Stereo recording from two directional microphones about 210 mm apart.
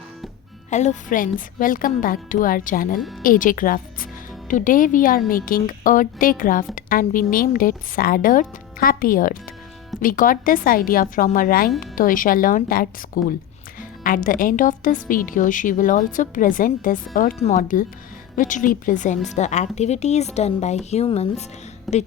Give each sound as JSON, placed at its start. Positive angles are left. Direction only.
{"t": 0.7, "sound": "a woman's voice", "side_deg": 35}
{"t": 21.9, "sound": "a woman's voice", "side_deg": 0}